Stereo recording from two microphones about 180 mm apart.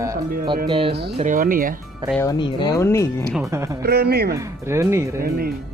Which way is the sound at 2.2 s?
25° left (ahead or behind).